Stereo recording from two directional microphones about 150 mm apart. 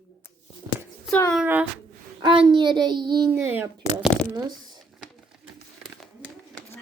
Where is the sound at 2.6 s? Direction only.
30° right (ahead or behind).